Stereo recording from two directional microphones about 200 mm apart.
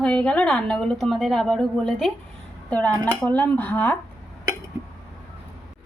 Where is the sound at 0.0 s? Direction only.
5° left (ahead or behind).